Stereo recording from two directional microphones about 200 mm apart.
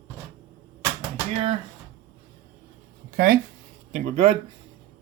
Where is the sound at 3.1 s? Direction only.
45° right (ahead or behind).